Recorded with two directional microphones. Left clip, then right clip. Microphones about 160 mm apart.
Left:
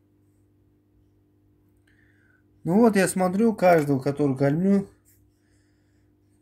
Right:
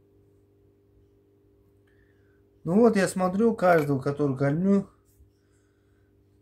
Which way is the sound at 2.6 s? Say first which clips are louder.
Left 1 dB; 15° left (ahead or behind).